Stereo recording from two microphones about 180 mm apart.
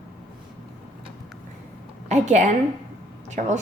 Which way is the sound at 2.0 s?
40° right (ahead or behind).